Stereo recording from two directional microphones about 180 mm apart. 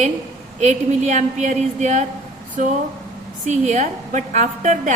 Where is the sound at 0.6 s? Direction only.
40° right (ahead or behind).